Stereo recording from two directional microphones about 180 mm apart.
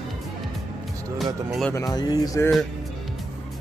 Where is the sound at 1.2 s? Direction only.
Centre (ahead or behind).